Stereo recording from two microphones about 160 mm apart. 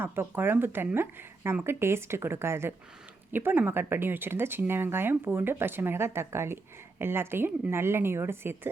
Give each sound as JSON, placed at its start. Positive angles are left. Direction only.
{"t": 0.0, "sound": "speech", "side_deg": -15}